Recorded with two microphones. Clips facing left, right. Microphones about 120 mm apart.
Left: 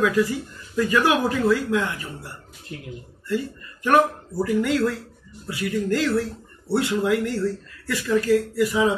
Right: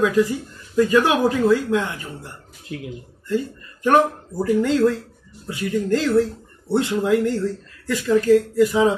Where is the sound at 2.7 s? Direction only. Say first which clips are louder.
Right 6 dB; 80° right.